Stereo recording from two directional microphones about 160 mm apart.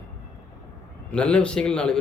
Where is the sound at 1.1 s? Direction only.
5° left (ahead or behind).